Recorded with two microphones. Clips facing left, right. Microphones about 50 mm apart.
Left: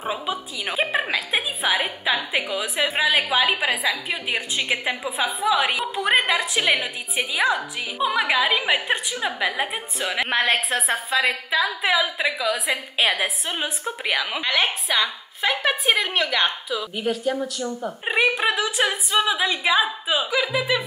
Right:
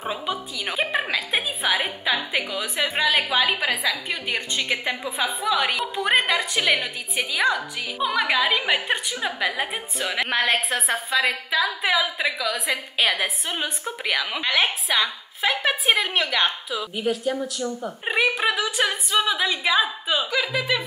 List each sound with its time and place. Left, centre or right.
0.0 s a woman's voice: centre